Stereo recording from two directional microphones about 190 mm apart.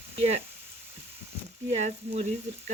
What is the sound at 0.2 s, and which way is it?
Frying, 35° right (ahead or behind).